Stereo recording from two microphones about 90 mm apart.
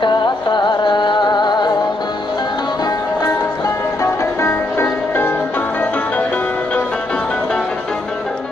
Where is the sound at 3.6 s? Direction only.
35° left (ahead or behind); by 7.7 s 10° left (ahead or behind).